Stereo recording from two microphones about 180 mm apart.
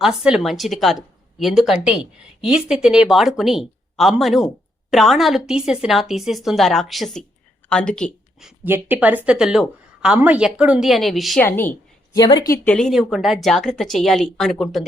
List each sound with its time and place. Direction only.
0.0 s speech: 5° right (ahead or behind)
11.4 s a sound: 10° left (ahead or behind)
12.2 s speech: 25° left (ahead or behind)
12.6 s speech: 5° left (ahead or behind)